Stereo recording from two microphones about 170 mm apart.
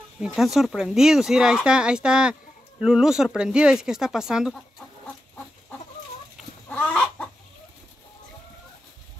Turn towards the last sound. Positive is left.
turn(degrees=10)  # may be behind; listen again after turning